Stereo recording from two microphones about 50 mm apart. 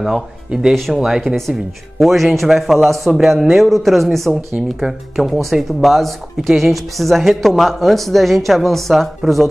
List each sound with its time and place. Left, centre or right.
0.0 s speech: centre